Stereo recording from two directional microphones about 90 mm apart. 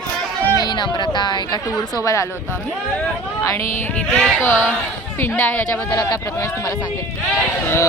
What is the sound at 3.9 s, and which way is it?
Speech, 15° left (ahead or behind).